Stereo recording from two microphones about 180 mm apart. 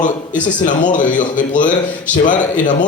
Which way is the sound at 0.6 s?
45° left (ahead or behind).